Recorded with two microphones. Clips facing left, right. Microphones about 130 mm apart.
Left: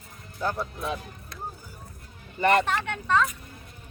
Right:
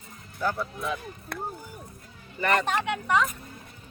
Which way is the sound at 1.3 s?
60° right (ahead or behind).